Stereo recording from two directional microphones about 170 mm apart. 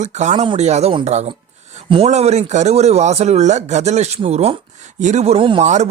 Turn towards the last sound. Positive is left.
turn(degrees=-45)  # may be behind; listen again after turning